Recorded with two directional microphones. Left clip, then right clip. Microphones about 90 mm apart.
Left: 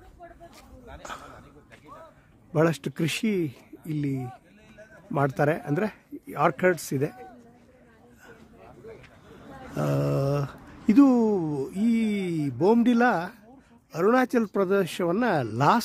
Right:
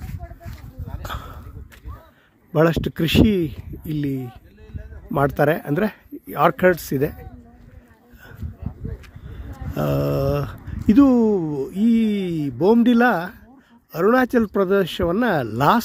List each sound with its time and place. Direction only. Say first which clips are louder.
1.0 s a sound: right 6 dB; 30° right (ahead or behind)
2.5 s speech: right 6 dB; 35° right (ahead or behind)
9.7 s speech: right 5 dB; 25° right (ahead or behind)